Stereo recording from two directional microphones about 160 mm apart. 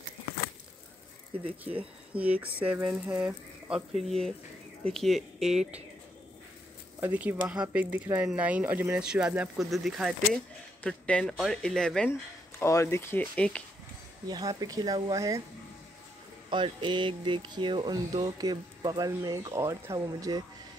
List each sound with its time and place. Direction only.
1.6 s speech: 10° right (ahead or behind)
7.0 s speech: 10° right (ahead or behind)
12.1 s speech: 20° left (ahead or behind)
14.2 s speech: 25° right (ahead or behind)
16.4 s speech: 30° right (ahead or behind)